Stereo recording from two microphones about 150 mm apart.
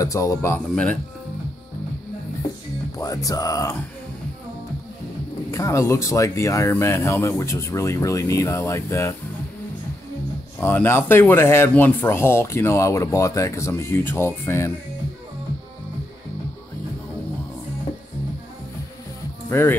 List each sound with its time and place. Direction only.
0.0 s speech: 20° left (ahead or behind)
3.0 s speech: 25° left (ahead or behind)
5.5 s speech: 20° left (ahead or behind)
10.6 s speech: 15° left (ahead or behind)
19.5 s speech: 15° left (ahead or behind)